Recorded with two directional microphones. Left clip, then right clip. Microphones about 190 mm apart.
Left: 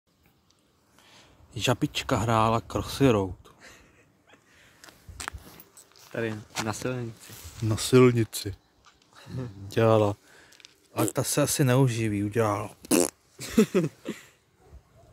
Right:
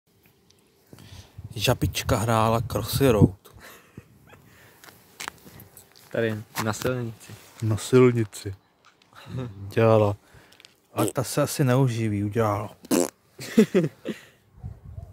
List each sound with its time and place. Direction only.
0.9 s speech: centre (ahead or behind)
3.5 s a sound: 25° right (ahead or behind)
4.8 s walk: 5° right (ahead or behind)
6.1 s speech: 35° right (ahead or behind)
7.6 s speech: centre (ahead or behind)
9.1 s dog: 15° right (ahead or behind)
9.7 s speech: centre (ahead or behind)
10.6 s a sound: 15° right (ahead or behind)
11.1 s speech: centre (ahead or behind)
13.4 s a sound: 20° right (ahead or behind)